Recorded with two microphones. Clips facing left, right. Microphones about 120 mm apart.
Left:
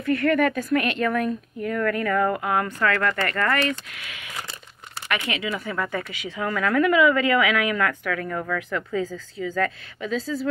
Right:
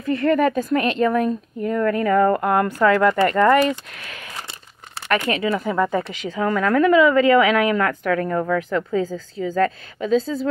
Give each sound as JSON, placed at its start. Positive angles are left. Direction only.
{"t": 0.0, "sound": "speech", "side_deg": -30}
{"t": 2.4, "sound": "speech", "side_deg": 0}
{"t": 5.1, "sound": "speech", "side_deg": -40}